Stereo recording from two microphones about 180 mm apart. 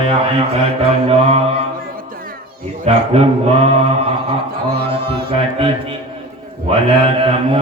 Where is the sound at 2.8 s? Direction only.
35° right (ahead or behind).